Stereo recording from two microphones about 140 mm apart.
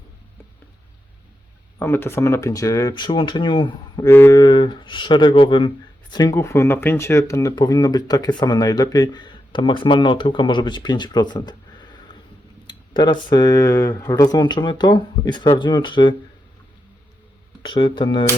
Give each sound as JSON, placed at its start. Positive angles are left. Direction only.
{"t": 1.8, "sound": "speech", "side_deg": 15}
{"t": 17.6, "sound": "speech", "side_deg": 35}